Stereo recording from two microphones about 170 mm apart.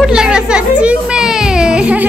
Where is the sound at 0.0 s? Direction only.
5° right (ahead or behind).